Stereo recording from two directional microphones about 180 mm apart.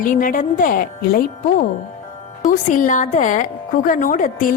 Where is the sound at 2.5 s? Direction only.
45° left (ahead or behind).